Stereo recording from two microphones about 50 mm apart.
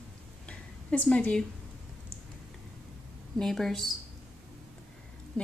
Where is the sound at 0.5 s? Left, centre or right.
Left.